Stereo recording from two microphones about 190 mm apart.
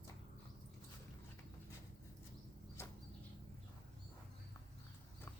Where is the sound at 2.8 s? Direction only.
15° left (ahead or behind).